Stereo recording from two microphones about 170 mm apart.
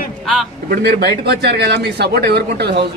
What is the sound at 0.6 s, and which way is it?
Speech, 70° right (ahead or behind).